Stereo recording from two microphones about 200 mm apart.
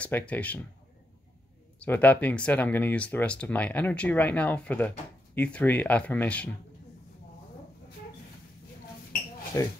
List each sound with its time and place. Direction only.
0.0 s speech: 5° left (ahead or behind)
1.8 s speech: 10° left (ahead or behind)
9.6 s speech: 15° left (ahead or behind)